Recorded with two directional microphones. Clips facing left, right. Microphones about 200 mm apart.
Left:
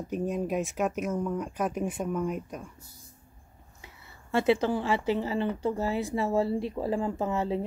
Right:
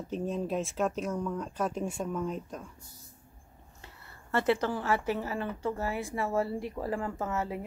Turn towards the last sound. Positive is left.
turn(degrees=20)  # may be behind; listen again after turning